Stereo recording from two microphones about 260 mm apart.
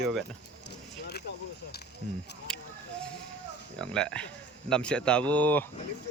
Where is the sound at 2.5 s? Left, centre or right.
Centre.